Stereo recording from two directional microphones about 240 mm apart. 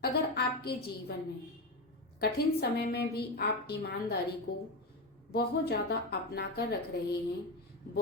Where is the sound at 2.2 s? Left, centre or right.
Left.